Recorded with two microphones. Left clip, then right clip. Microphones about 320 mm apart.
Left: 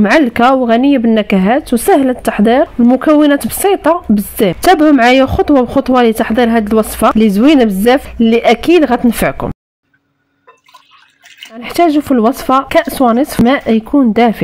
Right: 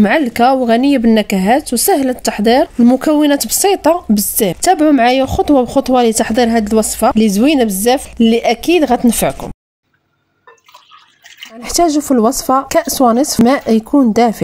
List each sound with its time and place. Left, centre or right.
0.0 s speech: right
11.6 s speech: right